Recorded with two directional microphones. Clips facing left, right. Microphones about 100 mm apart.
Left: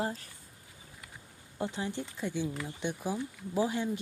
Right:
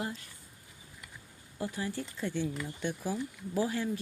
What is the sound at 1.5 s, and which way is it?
Speech, 25° left (ahead or behind).